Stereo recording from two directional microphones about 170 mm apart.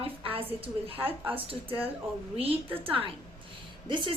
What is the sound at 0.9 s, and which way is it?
Speech, 10° right (ahead or behind).